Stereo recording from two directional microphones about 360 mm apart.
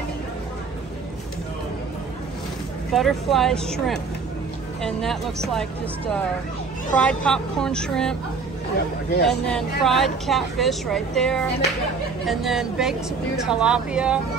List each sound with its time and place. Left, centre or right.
2.9 s speech: centre
6.9 s speech: centre
9.1 s speech: left
9.5 s speech: centre